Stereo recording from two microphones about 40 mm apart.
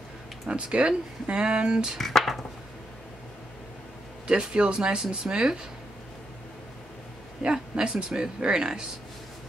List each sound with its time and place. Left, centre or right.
0.5 s speech: right
2.0 s speech: centre
4.3 s speech: right
7.4 s speech: right